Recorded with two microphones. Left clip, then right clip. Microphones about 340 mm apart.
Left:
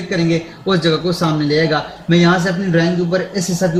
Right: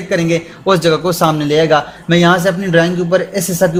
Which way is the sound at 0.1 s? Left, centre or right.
Centre.